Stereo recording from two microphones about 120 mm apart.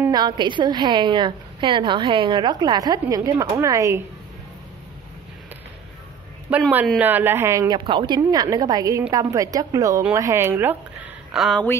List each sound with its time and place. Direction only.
0.1 s a woman's voice: 40° right (ahead or behind)
7.0 s a woman's voice: 15° right (ahead or behind)
7.7 s a woman's voice: 45° right (ahead or behind)
8.2 s a woman's voice: 30° right (ahead or behind)
11.3 s speech: centre (ahead or behind)